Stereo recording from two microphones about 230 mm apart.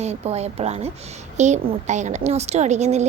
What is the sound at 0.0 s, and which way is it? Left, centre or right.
A woman's voice, right.